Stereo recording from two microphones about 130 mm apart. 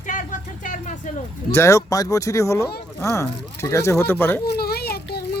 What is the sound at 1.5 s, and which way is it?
Speech, 20° left (ahead or behind).